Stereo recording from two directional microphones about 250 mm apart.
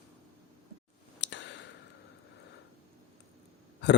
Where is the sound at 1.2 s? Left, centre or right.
Left.